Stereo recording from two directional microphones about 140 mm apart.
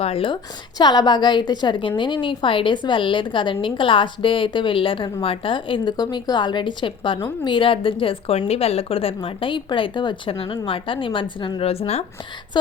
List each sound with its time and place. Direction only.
0.0 s a woman's voice: 40° left (ahead or behind)
0.8 s a woman's voice: 30° left (ahead or behind); by 12.0 s 45° left (ahead or behind)